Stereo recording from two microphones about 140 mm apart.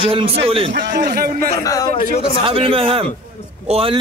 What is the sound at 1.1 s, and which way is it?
Speech, 90° right.